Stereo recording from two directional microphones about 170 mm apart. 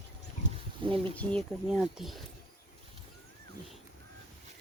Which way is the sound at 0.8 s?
30° right (ahead or behind).